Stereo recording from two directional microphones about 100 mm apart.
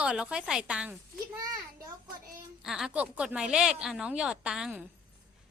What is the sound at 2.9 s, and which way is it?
A woman's voice, 15° right (ahead or behind).